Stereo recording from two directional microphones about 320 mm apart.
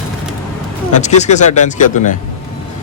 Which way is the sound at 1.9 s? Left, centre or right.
Left.